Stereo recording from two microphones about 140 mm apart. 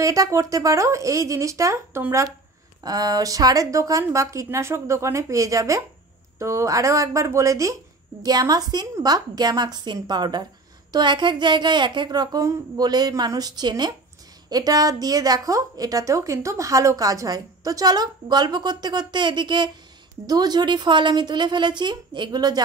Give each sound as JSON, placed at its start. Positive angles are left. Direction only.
{"t": 0.0, "sound": "a woman's voice", "side_deg": -25}